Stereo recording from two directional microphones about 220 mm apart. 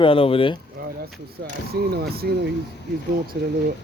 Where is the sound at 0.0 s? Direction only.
25° left (ahead or behind).